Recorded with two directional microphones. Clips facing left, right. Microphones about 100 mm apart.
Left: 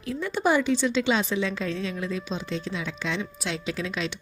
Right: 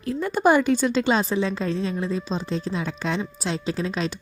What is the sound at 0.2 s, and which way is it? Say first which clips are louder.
A woman's voice: right 5 dB; 45° right (ahead or behind).